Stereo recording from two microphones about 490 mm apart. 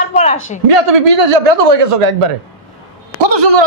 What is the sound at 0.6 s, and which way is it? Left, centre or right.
Speech, right.